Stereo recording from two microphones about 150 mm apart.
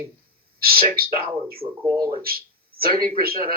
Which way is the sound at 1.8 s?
20° right (ahead or behind).